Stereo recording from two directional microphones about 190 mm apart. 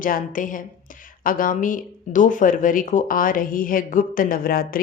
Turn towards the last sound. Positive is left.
turn(degrees=50)  # may be behind; listen again after turning